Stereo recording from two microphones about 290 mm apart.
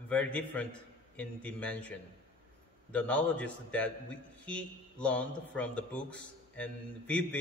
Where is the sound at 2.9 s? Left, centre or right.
Centre.